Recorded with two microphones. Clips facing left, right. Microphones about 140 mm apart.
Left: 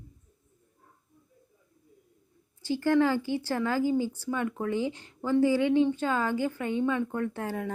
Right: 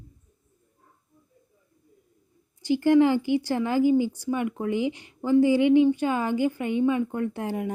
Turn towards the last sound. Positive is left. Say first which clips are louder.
# right 3 dB
turn(degrees=-15)  # may be behind; listen again after turning